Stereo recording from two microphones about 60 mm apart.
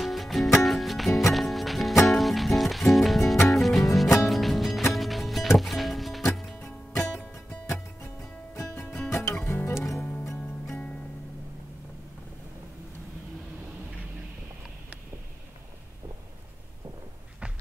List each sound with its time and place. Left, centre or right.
0.0 s music: centre
7.0 s music: left
9.8 s music: left